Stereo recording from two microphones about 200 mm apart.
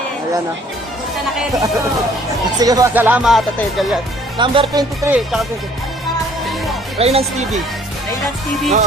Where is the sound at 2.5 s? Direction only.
20° right (ahead or behind); by 4.0 s centre (ahead or behind).